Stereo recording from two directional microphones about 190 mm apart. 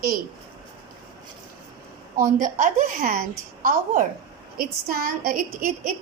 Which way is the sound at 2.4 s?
45° right (ahead or behind).